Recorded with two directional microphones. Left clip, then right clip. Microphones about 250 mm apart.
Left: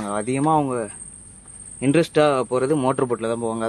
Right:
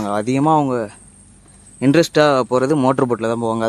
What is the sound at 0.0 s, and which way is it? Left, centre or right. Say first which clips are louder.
Speech: right 5 dB; right.